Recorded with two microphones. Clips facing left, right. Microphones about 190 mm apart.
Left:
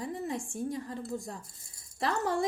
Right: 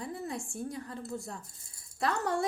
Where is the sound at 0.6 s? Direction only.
20° left (ahead or behind).